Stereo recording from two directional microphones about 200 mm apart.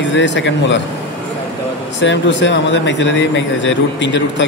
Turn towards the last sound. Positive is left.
turn(degrees=65)  # may be behind; listen again after turning